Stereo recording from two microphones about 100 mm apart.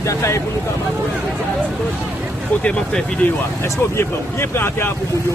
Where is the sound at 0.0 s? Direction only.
30° left (ahead or behind).